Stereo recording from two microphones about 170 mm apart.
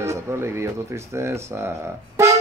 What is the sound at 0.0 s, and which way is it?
Speech, 15° right (ahead or behind).